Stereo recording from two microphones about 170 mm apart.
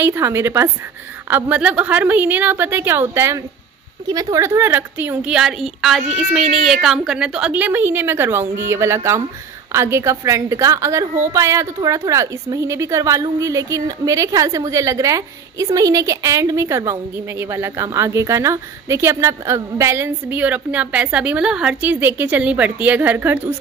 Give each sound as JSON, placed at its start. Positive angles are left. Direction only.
{"t": 0.0, "sound": "a woman's voice", "side_deg": -15}